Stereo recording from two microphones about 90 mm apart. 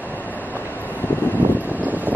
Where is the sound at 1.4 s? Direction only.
20° right (ahead or behind).